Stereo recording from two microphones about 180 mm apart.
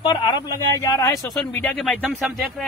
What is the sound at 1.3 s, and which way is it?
Speech, 5° left (ahead or behind).